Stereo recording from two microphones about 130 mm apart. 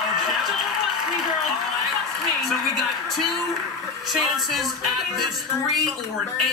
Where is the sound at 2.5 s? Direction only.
Centre (ahead or behind).